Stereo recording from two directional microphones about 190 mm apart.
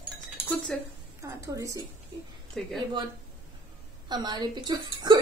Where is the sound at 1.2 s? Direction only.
15° right (ahead or behind).